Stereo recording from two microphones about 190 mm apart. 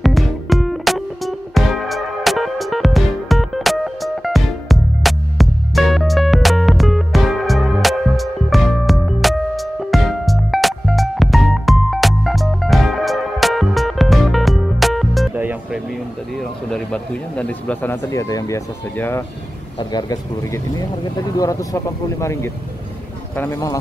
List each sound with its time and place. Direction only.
0.0 s music: centre (ahead or behind)
16.3 s speech: 5° left (ahead or behind)
19.8 s speech: 20° left (ahead or behind)